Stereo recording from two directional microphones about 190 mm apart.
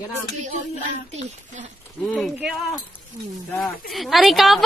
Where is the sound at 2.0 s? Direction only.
Centre (ahead or behind).